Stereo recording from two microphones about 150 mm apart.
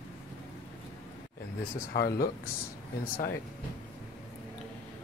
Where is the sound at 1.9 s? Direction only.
90° left.